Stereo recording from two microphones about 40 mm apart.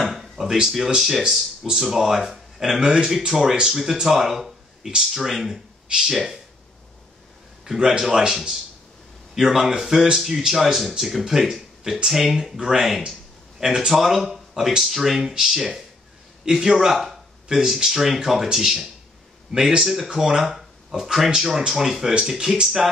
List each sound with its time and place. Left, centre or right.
0.0 s a sound: centre
0.8 s speech: centre
7.6 s speech: centre
14.8 s speech: centre
17.5 s speech: centre
20.5 s a sound: centre
21.3 s speech: centre